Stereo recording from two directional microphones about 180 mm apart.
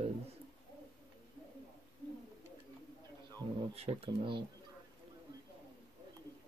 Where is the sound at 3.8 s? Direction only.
30° right (ahead or behind).